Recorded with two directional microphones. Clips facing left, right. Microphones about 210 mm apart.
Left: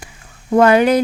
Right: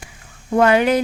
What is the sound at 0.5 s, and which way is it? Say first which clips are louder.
Speech: left 3 dB; 40° left (ahead or behind).